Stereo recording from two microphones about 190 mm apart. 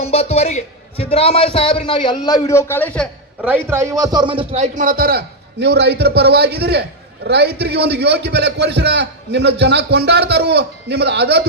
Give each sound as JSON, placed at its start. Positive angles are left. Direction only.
{"t": 0.0, "sound": "a man's voice", "side_deg": 35}
{"t": 3.4, "sound": "a man's voice", "side_deg": -10}